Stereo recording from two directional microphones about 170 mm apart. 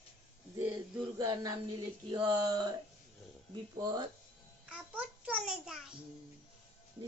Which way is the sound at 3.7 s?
25° right (ahead or behind).